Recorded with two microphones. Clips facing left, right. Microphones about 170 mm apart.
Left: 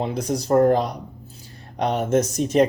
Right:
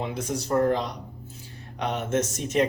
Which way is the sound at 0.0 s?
35° left (ahead or behind).